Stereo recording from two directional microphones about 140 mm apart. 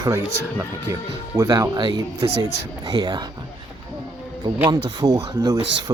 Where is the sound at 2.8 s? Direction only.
30° right (ahead or behind).